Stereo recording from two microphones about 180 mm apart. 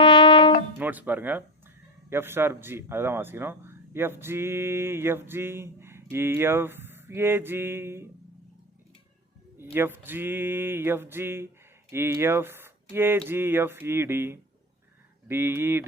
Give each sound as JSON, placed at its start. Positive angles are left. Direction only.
{"t": 0.0, "sound": "music", "side_deg": 25}
{"t": 0.8, "sound": "speech", "side_deg": -10}
{"t": 9.7, "sound": "speech", "side_deg": -10}